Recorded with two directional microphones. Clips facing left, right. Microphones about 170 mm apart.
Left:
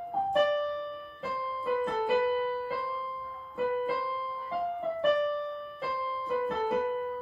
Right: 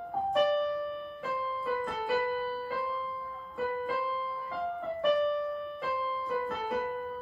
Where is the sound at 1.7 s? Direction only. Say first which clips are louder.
Left 5 dB; 20° left (ahead or behind).